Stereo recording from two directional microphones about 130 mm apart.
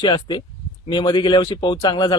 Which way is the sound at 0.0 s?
40° left (ahead or behind).